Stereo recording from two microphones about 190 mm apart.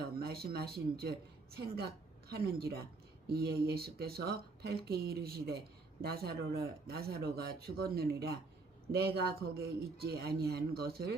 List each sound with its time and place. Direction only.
0.2 s speech: 55° right (ahead or behind)
2.3 s speech: 55° right (ahead or behind)